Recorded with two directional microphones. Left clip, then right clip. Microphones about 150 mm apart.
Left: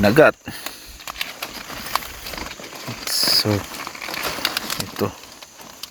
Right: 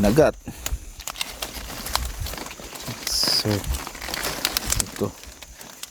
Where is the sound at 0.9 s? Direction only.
5° right (ahead or behind).